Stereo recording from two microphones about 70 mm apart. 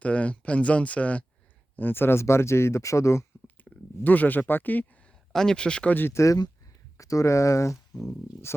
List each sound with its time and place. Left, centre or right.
0.0 s speech: centre; by 3.2 s left
3.4 s a sound: left
5.3 s speech: centre
5.9 s speech: left
6.1 s speech: left